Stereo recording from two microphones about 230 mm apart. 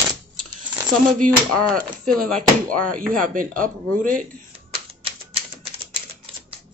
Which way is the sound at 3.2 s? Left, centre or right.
Right.